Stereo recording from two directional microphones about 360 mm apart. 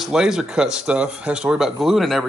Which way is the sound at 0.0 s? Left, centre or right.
Centre.